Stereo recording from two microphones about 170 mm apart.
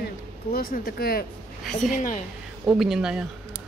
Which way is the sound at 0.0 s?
60° left (ahead or behind).